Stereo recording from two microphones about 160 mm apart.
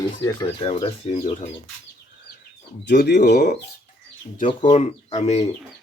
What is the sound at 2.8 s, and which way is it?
Speech, 90° left.